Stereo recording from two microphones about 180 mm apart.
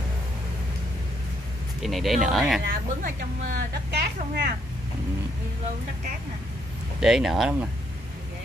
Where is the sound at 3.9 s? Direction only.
65° right (ahead or behind).